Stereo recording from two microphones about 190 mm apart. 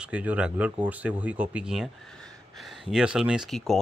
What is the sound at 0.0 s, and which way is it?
Speech, 5° right (ahead or behind).